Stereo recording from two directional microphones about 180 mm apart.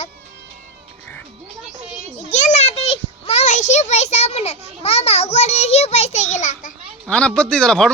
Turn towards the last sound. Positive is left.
turn(degrees=5)  # may be behind; listen again after turning